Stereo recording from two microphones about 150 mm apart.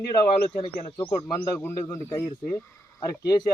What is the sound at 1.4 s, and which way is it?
A man's voice, 15° left (ahead or behind).